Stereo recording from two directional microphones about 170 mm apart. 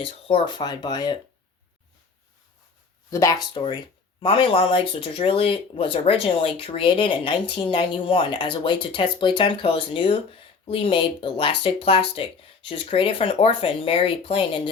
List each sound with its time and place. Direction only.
0.0 s speech: 30° left (ahead or behind)
3.1 s speech: 20° left (ahead or behind)